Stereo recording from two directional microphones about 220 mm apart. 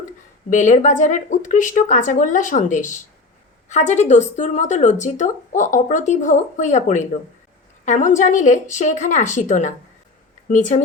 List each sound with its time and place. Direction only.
0.5 s speech: 35° left (ahead or behind)